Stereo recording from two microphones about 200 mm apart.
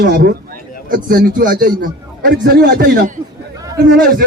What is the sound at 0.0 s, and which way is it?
A man's voice, 50° right (ahead or behind).